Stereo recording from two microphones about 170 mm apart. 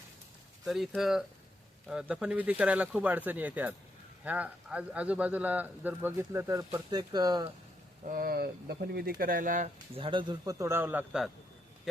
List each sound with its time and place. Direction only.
0.6 s speech: centre (ahead or behind); by 7.5 s 25° right (ahead or behind)
8.0 s speech: 55° right (ahead or behind)
9.7 s a man's voice: 30° right (ahead or behind); by 11.3 s 5° right (ahead or behind)